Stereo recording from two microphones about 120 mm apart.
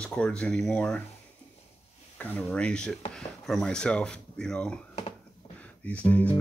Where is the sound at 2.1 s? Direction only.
15° left (ahead or behind).